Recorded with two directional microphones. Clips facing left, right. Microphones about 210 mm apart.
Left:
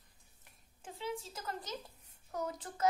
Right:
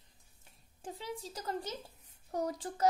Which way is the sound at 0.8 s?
35° right (ahead or behind).